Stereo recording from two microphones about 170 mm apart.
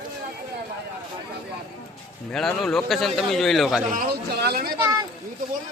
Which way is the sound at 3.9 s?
65° right (ahead or behind).